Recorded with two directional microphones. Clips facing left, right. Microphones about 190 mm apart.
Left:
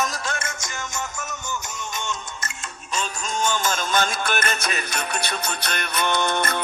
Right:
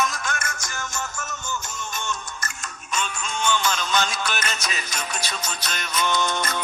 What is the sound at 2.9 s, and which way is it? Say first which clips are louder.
Music: left 2 dB; 45° left (ahead or behind).